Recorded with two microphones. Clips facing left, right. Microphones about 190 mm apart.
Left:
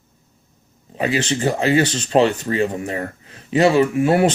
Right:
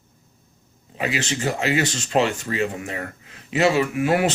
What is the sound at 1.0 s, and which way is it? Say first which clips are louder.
Speech: left 5 dB; 30° left (ahead or behind).